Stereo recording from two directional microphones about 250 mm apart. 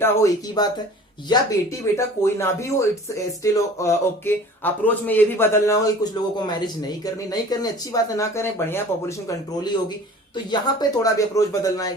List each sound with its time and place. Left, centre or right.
0.0 s speech: centre
10.3 s speech: centre